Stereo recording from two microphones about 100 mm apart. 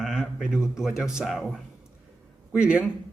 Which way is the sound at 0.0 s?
5° right (ahead or behind).